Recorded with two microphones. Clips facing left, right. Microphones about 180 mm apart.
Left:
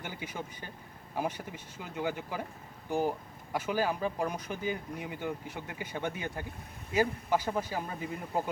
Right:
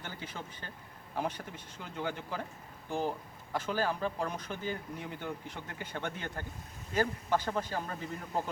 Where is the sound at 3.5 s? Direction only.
10° left (ahead or behind).